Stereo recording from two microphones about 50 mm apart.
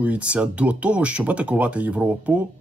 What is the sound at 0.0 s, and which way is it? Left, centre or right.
A man's voice, right.